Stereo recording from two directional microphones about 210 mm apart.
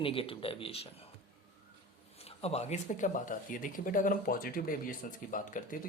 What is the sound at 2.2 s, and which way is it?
Speech, 30° left (ahead or behind).